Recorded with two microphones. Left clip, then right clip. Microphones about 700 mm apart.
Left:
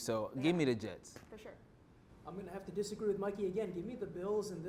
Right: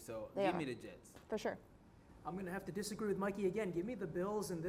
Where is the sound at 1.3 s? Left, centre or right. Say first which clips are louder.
Right 13 dB; right.